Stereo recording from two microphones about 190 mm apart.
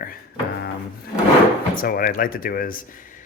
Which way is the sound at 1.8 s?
50° left (ahead or behind).